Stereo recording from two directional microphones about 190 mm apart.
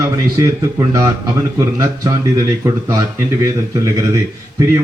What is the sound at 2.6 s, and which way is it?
Speech, 15° right (ahead or behind).